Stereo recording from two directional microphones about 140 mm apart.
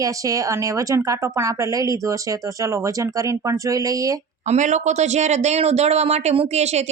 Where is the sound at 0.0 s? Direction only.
25° right (ahead or behind).